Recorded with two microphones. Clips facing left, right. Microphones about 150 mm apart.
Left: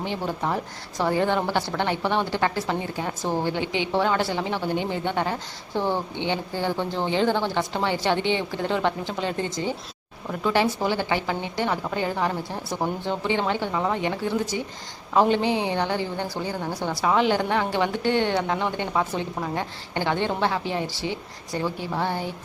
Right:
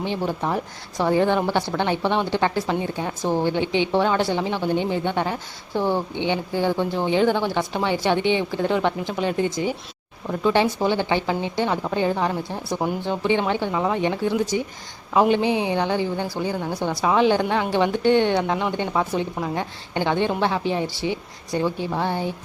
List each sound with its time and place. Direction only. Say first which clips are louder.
0.0 s speech: right 3 dB; 15° right (ahead or behind)